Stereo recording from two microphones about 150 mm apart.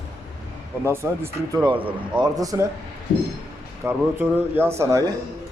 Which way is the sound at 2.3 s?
25° right (ahead or behind).